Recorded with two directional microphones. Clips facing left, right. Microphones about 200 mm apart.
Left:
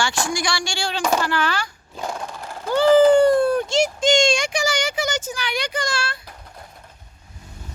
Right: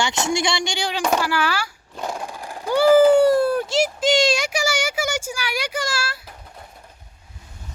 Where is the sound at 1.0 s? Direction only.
5° right (ahead or behind).